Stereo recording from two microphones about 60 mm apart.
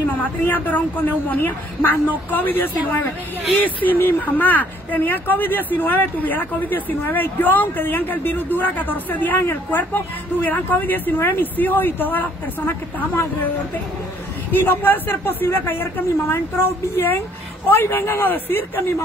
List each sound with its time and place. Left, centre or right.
0.5 s speech: left
14.5 s speech: left